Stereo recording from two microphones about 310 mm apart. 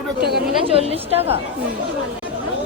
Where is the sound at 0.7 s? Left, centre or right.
Centre.